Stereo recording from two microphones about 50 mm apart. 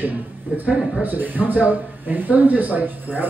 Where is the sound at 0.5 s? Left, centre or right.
Right.